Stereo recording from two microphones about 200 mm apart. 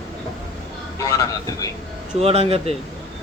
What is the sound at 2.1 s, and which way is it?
Speech, 30° right (ahead or behind).